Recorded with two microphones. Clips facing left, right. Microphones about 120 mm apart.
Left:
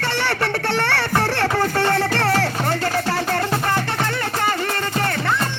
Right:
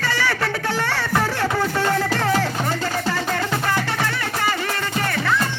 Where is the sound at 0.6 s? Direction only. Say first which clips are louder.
Left 2 dB; 70° left (ahead or behind).